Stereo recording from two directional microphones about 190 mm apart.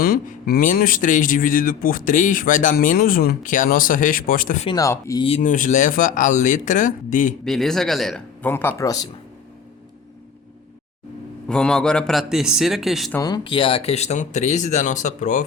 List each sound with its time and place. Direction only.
0.0 s speech: 50° left (ahead or behind)
4.6 s speech: 20° left (ahead or behind)
5.4 s speech: 45° left (ahead or behind)
7.4 s a man's voice: centre (ahead or behind)
11.4 s a man's voice: 5° left (ahead or behind)
13.1 s speech: 20° left (ahead or behind); by 15.4 s 40° left (ahead or behind)